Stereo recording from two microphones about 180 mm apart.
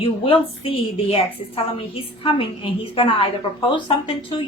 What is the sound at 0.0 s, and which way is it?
A woman's voice, 30° left (ahead or behind).